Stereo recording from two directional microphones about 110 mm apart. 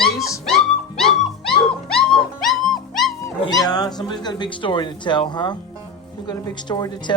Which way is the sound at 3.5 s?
35° left (ahead or behind).